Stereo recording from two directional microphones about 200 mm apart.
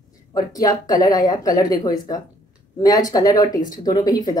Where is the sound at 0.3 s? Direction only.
20° left (ahead or behind).